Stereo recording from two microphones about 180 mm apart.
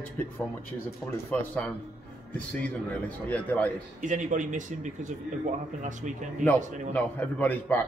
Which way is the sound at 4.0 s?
45° right (ahead or behind).